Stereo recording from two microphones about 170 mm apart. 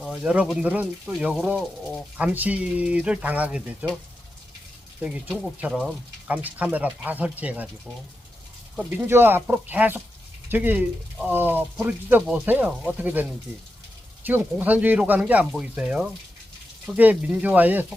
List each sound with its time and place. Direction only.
0.0 s speech: 5° right (ahead or behind)
4.9 s speech: 10° right (ahead or behind)
8.7 s speech: 5° right (ahead or behind)
14.3 s speech: 10° right (ahead or behind)